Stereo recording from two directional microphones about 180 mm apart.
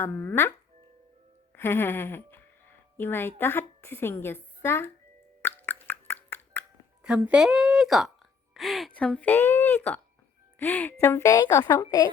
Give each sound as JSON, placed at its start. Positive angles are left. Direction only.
{"t": 0.0, "sound": "speech", "side_deg": 10}
{"t": 1.5, "sound": "speech", "side_deg": 10}
{"t": 5.4, "sound": "plop", "side_deg": 10}
{"t": 7.0, "sound": "a woman's voice", "side_deg": -5}